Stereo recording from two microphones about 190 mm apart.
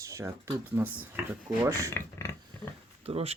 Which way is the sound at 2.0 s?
15° left (ahead or behind).